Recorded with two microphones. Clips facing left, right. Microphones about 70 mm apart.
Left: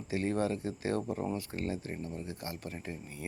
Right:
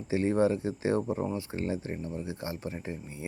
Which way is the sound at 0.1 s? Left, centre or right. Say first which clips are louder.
Right 6 dB; right.